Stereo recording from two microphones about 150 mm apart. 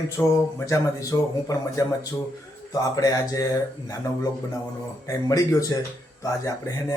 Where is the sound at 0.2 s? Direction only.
20° left (ahead or behind).